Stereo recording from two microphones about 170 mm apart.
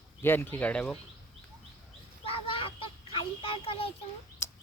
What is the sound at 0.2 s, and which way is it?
Speech, 10° left (ahead or behind).